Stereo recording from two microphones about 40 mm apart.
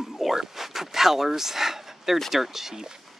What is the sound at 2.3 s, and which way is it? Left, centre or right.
Speech, centre.